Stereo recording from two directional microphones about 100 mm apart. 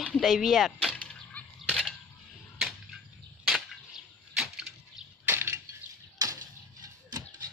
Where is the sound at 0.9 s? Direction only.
15° left (ahead or behind).